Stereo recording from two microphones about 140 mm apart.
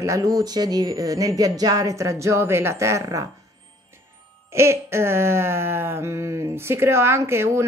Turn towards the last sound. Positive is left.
turn(degrees=-20)  # may be behind; listen again after turning